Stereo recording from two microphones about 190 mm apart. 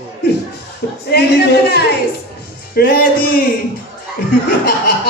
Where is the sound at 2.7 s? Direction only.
55° left (ahead or behind).